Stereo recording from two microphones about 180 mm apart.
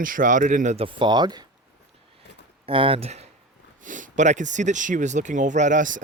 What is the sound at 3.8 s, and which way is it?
Speech, 45° right (ahead or behind).